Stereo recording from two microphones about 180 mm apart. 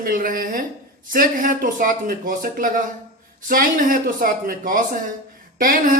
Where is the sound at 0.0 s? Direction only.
50° right (ahead or behind).